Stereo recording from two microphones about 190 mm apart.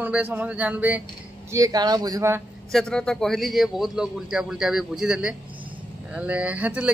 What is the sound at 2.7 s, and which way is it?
A man's voice, 5° left (ahead or behind).